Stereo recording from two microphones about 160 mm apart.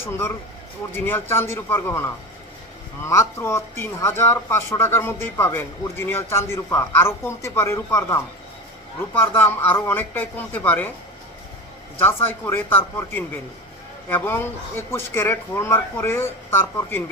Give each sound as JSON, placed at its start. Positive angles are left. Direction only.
{"t": 0.0, "sound": "speech", "side_deg": 15}
{"t": 3.1, "sound": "speech", "side_deg": 20}
{"t": 9.2, "sound": "speech", "side_deg": 15}
{"t": 11.9, "sound": "speech", "side_deg": 15}